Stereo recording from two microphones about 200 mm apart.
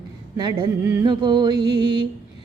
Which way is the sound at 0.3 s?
20° right (ahead or behind).